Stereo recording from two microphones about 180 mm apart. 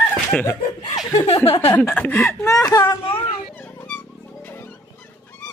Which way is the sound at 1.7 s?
10° left (ahead or behind).